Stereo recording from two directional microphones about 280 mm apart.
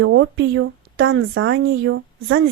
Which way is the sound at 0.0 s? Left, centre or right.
Right.